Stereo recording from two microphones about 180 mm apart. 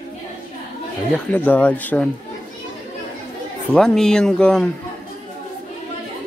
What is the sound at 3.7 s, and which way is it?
Speech, 5° left (ahead or behind).